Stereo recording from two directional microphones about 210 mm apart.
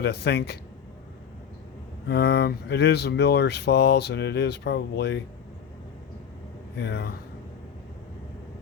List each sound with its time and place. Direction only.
0.0 s speech: 50° left (ahead or behind)
2.0 s speech: 50° left (ahead or behind)
6.7 s speech: 55° left (ahead or behind)